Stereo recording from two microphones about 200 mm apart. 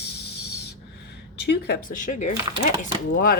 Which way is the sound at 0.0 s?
55° left (ahead or behind).